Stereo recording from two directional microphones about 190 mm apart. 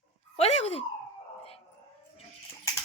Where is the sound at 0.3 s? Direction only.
35° left (ahead or behind).